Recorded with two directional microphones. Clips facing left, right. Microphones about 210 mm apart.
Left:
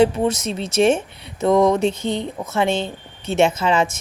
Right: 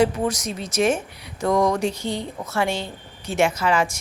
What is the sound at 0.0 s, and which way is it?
A woman's voice, 25° left (ahead or behind).